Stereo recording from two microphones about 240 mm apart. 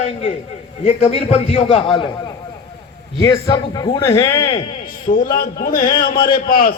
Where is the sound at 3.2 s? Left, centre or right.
Centre.